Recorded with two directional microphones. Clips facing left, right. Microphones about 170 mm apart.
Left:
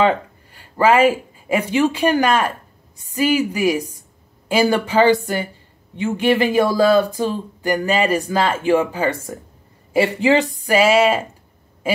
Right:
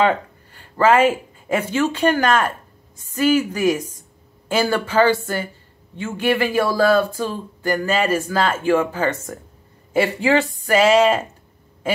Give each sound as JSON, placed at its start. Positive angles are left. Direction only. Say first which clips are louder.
{"t": 0.6, "sound": "speech", "louder": "left 1 dB", "side_deg": 10}